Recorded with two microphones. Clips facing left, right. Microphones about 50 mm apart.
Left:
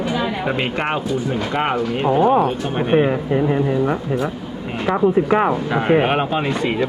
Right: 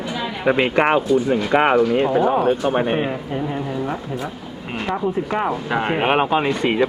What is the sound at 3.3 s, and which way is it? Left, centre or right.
Speech, left.